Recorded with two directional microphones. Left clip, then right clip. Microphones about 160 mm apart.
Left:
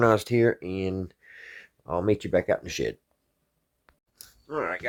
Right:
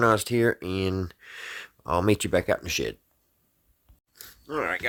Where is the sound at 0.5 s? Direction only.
30° right (ahead or behind).